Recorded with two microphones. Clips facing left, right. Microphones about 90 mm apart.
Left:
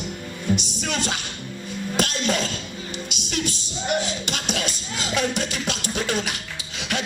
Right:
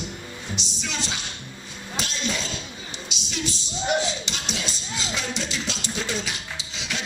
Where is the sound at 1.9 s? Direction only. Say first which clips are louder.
Left 6 dB; 55° left (ahead or behind).